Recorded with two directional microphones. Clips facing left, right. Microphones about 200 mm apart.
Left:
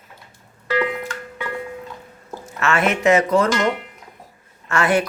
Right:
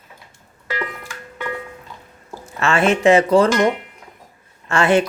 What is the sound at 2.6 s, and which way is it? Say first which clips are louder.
Speech: right 3 dB; 30° right (ahead or behind).